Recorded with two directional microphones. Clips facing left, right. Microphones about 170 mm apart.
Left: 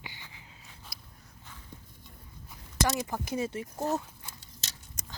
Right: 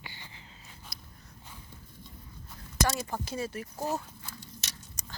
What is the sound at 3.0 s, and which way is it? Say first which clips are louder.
Speech: left 2 dB; 15° left (ahead or behind).